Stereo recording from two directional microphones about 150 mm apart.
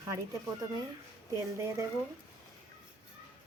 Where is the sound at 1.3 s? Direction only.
20° right (ahead or behind).